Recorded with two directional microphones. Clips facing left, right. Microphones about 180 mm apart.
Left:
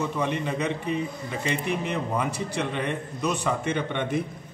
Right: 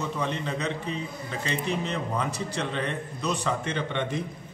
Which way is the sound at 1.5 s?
55° left (ahead or behind).